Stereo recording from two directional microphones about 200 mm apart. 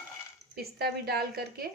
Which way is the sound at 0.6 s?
50° right (ahead or behind).